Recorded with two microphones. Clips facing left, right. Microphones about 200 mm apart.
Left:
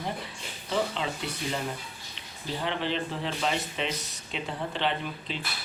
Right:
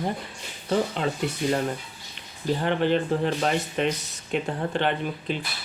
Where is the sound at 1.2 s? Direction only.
50° right (ahead or behind).